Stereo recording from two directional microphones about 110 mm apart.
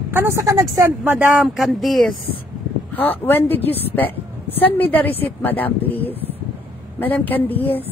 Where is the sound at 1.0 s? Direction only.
15° right (ahead or behind).